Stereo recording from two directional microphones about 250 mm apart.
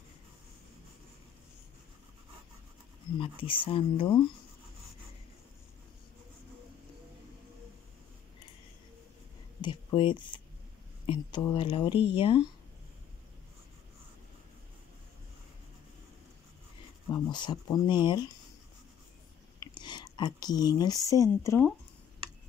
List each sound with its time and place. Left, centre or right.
3.2 s speech: left
9.6 s speech: centre
17.1 s speech: centre
19.6 s speech: centre